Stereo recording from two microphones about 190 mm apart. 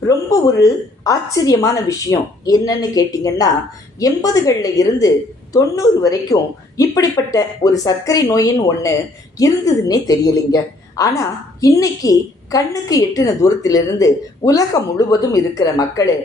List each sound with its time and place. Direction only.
0.0 s a woman's voice: 15° left (ahead or behind)